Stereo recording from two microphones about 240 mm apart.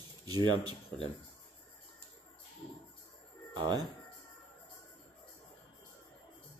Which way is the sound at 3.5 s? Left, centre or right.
Centre.